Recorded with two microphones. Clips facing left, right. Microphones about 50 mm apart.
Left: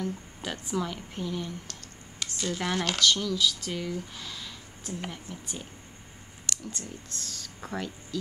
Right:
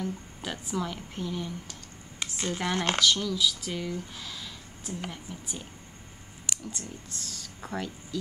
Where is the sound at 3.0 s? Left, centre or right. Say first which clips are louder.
Left 2 dB; centre.